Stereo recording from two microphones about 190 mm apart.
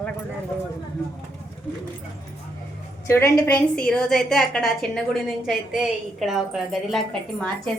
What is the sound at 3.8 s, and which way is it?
A woman's voice, 5° left (ahead or behind).